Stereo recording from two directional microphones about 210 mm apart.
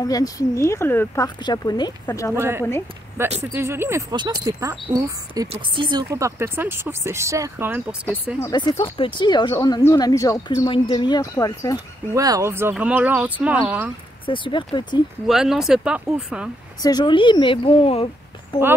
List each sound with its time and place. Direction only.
0.0 s speech: 15° left (ahead or behind)
2.3 s speech: 10° right (ahead or behind)
8.4 s speech: 20° left (ahead or behind)
12.1 s speech: 15° right (ahead or behind)
14.2 s speech: 25° left (ahead or behind)
15.2 s speech: centre (ahead or behind)
16.8 s speech: 20° left (ahead or behind)